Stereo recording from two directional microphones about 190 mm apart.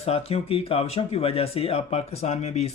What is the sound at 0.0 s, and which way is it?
Speech, 30° left (ahead or behind).